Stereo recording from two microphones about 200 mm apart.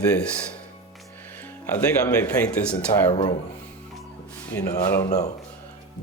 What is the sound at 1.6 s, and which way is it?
Speech, 10° left (ahead or behind).